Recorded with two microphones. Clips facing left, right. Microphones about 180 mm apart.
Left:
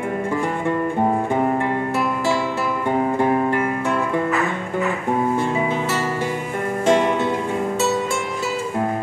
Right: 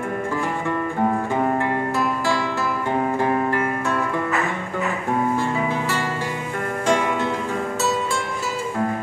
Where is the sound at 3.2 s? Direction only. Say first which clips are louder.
Left 2 dB; 15° left (ahead or behind).